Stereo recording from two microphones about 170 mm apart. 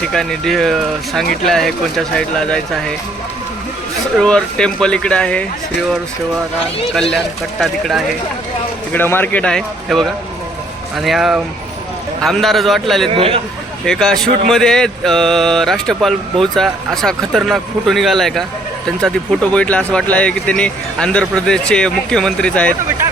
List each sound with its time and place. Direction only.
0.0 s speech: 5° left (ahead or behind)
4.2 s speech: 5° left (ahead or behind)
7.6 s speech: centre (ahead or behind)
8.9 s a man's voice: 10° left (ahead or behind)
13.1 s a man's voice: 35° right (ahead or behind)
13.8 s speech: 5° left (ahead or behind)